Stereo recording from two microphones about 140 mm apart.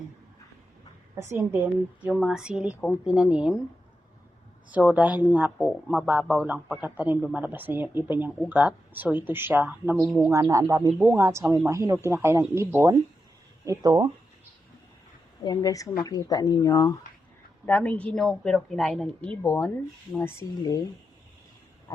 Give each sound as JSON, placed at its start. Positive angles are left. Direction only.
{"t": 1.3, "sound": "speech", "side_deg": -20}
{"t": 2.1, "sound": "speech", "side_deg": 0}
{"t": 4.7, "sound": "speech", "side_deg": -10}
{"t": 5.5, "sound": "speech", "side_deg": 0}
{"t": 10.9, "sound": "speech", "side_deg": -10}
{"t": 15.4, "sound": "speech", "side_deg": 25}
{"t": 17.7, "sound": "a woman's voice", "side_deg": 10}